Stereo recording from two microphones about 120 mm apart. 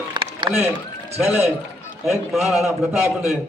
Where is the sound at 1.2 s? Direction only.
5° right (ahead or behind).